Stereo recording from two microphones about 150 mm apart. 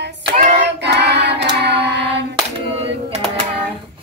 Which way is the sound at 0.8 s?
90° right.